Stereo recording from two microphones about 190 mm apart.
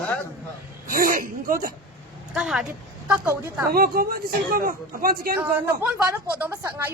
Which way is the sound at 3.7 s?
50° right (ahead or behind).